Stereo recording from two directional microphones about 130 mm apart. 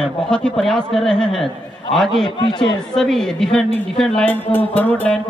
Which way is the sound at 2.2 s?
35° left (ahead or behind).